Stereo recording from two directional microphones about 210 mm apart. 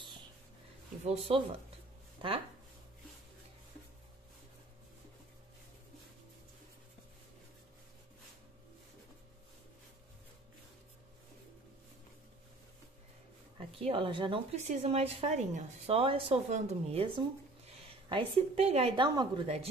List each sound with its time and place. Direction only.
1.0 s a woman's voice: 30° right (ahead or behind)
13.6 s a woman's voice: 25° right (ahead or behind)